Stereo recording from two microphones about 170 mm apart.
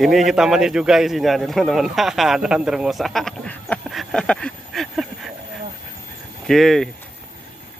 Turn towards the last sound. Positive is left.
turn(degrees=0)  # may be behind; listen again after turning